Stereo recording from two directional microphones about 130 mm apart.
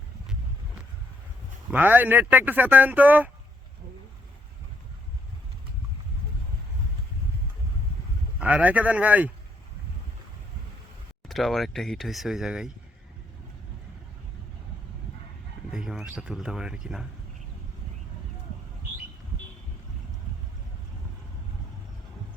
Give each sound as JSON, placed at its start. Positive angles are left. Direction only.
{"t": 1.7, "sound": "speech", "side_deg": -15}
{"t": 8.4, "sound": "speech", "side_deg": -10}
{"t": 11.3, "sound": "speech", "side_deg": 0}
{"t": 15.7, "sound": "speech", "side_deg": -5}